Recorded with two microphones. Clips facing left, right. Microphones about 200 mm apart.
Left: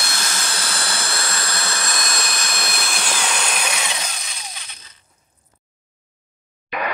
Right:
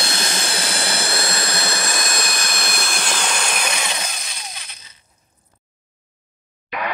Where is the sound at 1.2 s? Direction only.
25° right (ahead or behind); by 4.6 s 5° right (ahead or behind).